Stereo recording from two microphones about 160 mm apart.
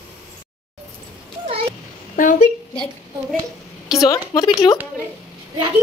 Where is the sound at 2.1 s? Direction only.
55° left (ahead or behind).